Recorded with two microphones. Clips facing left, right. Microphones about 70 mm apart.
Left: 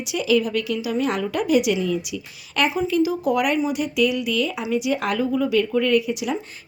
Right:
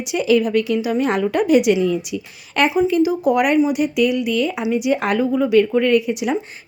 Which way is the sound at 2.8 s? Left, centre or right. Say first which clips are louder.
Right 4 dB; right.